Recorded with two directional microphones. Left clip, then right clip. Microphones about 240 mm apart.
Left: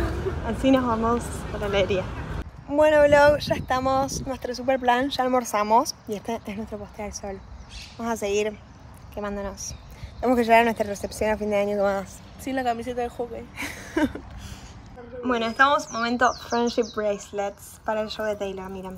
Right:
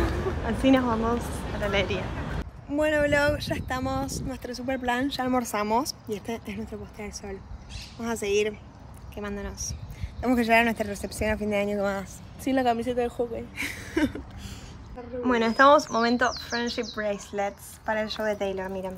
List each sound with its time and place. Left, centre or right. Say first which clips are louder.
0.0 s a sound: even; centre
0.7 s speech: left 2 dB; centre
2.7 s speech: left 7 dB; centre
12.4 s a woman's voice: right 2 dB; right
13.6 s a sound: left 2 dB; centre
15.2 s speech: right 1 dB; centre
16.4 s speech: left 6 dB; centre